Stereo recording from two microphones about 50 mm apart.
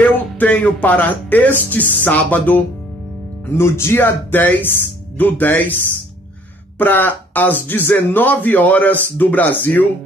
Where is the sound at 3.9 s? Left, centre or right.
Left.